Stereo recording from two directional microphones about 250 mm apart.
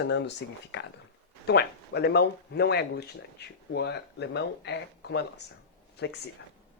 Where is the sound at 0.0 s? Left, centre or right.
Left.